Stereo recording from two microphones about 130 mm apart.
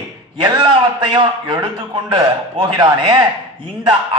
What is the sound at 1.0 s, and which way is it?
Speech, 40° right (ahead or behind).